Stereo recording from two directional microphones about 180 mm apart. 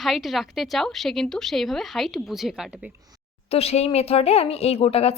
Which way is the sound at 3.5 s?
35° left (ahead or behind).